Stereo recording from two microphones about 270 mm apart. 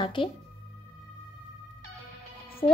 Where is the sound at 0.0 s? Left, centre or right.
Centre.